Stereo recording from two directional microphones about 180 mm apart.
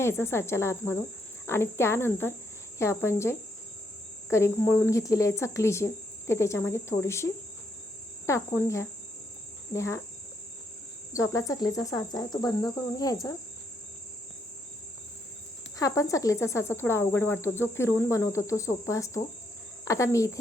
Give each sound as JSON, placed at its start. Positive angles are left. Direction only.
{"t": 0.0, "sound": "speech", "side_deg": 15}
{"t": 11.1, "sound": "speech", "side_deg": 15}
{"t": 15.8, "sound": "speech", "side_deg": 15}